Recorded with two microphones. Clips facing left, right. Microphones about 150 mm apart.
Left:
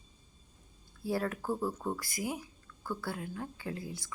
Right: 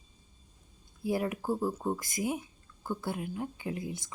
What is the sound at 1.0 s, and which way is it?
Speech, 15° right (ahead or behind).